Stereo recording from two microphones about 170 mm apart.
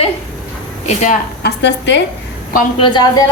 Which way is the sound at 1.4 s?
90° left.